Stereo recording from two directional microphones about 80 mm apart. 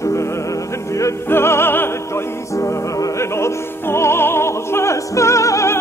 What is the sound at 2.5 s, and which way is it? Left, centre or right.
Opera, left.